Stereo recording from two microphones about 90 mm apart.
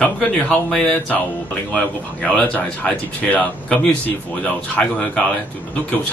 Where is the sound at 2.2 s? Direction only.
15° left (ahead or behind).